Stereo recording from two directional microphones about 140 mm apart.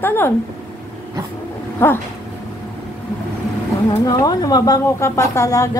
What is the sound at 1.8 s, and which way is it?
Speech, 15° left (ahead or behind).